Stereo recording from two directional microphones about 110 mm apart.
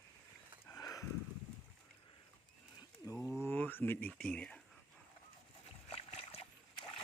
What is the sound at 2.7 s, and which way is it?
Wild animals, 30° left (ahead or behind).